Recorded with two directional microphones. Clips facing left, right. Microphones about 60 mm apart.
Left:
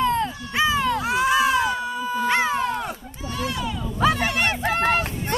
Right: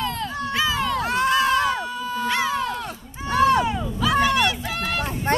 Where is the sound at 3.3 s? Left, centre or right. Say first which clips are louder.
Right 11 dB; right.